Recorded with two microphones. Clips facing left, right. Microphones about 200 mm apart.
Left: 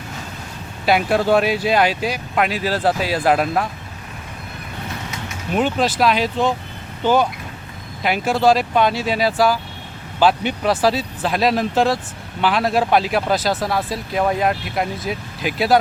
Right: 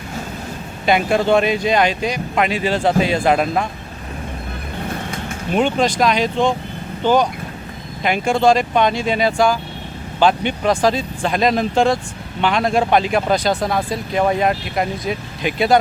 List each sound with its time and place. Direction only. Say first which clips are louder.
0.9 s speech: right 1 dB; 5° left (ahead or behind)
4.9 s vehicle: right 4 dB; 50° right (ahead or behind)
5.5 s speech: right 2 dB; 5° left (ahead or behind)
8.0 s speech: right 1 dB; 5° left (ahead or behind)